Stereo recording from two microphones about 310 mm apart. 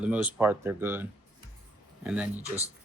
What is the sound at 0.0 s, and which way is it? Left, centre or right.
Speech, centre.